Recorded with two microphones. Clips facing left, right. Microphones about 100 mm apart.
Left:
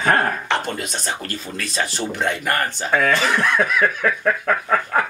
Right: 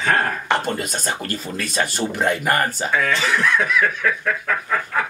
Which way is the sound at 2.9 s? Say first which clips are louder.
Left 3 dB; 50° left (ahead or behind).